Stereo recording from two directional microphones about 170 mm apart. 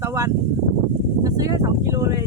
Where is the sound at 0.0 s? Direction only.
15° right (ahead or behind).